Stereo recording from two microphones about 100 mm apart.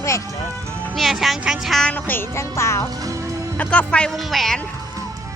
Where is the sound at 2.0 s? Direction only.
25° left (ahead or behind).